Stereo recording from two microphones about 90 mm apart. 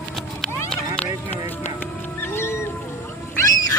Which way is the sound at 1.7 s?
25° left (ahead or behind).